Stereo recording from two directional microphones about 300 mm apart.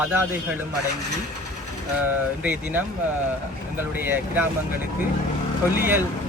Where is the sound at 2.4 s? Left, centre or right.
Centre.